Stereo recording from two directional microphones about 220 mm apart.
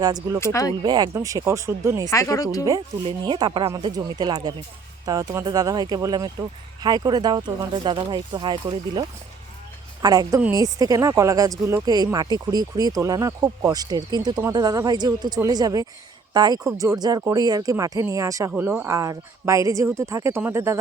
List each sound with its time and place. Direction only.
0.0 s speech: 15° right (ahead or behind)
0.3 s speech: 10° left (ahead or behind)
0.8 s speech: 20° right (ahead or behind)
2.0 s speech: 15° left (ahead or behind)
3.2 s speech: 20° right (ahead or behind)
10.0 s speech: 15° right (ahead or behind)